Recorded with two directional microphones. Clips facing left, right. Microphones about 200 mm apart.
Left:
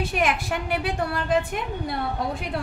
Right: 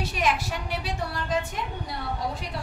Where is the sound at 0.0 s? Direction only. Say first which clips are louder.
Left 2 dB; 55° left (ahead or behind).